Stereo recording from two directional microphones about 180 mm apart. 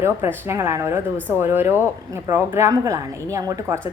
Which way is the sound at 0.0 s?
15° right (ahead or behind).